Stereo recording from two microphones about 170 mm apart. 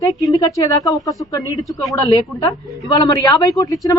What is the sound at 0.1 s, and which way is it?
A man's voice, 20° left (ahead or behind).